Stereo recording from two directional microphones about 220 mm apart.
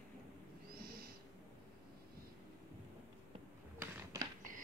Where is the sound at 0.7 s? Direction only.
45° right (ahead or behind).